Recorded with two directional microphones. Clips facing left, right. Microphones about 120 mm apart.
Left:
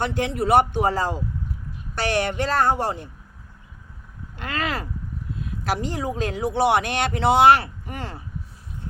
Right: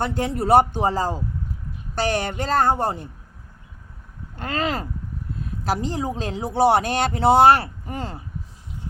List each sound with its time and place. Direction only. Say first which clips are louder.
0.0 s speech: even; 40° right (ahead or behind)
4.4 s speech: right 3 dB; 35° right (ahead or behind)
7.9 s speech: right 3 dB; 20° right (ahead or behind)